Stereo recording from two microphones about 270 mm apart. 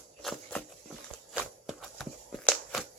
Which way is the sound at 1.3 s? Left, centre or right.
Centre.